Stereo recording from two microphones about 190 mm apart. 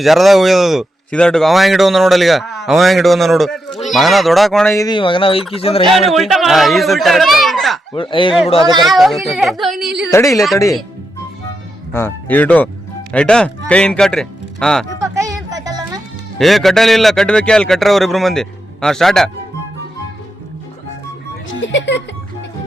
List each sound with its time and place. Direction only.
0.0 s speech: centre (ahead or behind)
4.7 s a man's voice: 20° left (ahead or behind)
5.9 s speech: centre (ahead or behind)
7.9 s speech: 25° left (ahead or behind)
8.8 s speech: centre (ahead or behind)
9.7 s a woman's voice: 60° right (ahead or behind)
10.1 s speech: 15° left (ahead or behind)
11.9 s speech: 10° left (ahead or behind)
14.9 s a sound: 15° right (ahead or behind)
16.4 s speech: centre (ahead or behind)
21.6 s speech: 75° left (ahead or behind)